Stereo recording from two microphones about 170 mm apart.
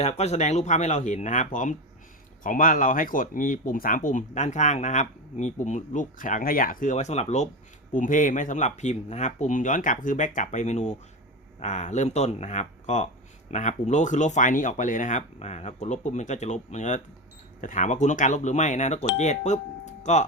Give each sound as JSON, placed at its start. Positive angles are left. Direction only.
{"t": 0.0, "sound": "speech", "side_deg": 40}